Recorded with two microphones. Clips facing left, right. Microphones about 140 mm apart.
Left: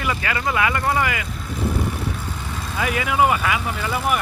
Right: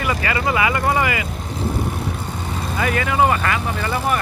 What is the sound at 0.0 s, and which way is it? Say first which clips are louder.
Speech: right 3 dB; centre (ahead or behind).